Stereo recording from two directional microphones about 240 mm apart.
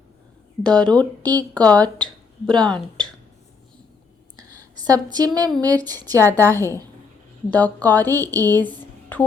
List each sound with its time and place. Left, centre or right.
0.6 s speech: centre
0.9 s speech: centre
1.5 s speech: centre
4.4 s a sound: centre
5.1 s speech: centre
6.4 s speech: centre
8.1 s speech: centre
9.1 s speech: centre